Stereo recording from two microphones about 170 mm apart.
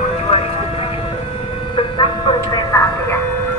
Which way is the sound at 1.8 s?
30° left (ahead or behind).